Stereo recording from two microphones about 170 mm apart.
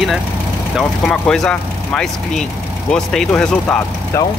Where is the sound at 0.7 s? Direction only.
5° left (ahead or behind).